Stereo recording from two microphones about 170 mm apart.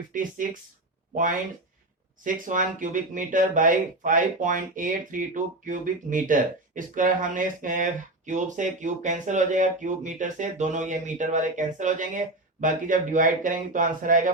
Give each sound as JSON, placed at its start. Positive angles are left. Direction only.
{"t": 0.1, "sound": "speech", "side_deg": -50}